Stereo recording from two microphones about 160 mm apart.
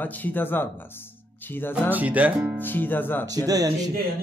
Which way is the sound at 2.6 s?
10° left (ahead or behind).